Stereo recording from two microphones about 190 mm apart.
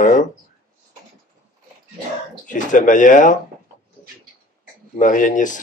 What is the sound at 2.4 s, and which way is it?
Speech, 45° left (ahead or behind).